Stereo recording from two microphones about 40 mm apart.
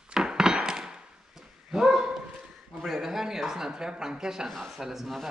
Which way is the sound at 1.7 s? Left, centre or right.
Centre.